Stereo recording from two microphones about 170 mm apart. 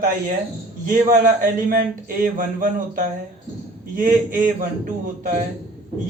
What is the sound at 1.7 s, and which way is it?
Speech, 55° right (ahead or behind).